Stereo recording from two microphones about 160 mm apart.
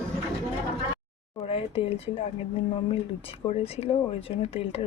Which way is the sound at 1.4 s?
35° left (ahead or behind).